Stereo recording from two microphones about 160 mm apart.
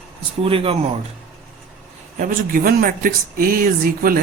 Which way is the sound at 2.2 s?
60° right (ahead or behind).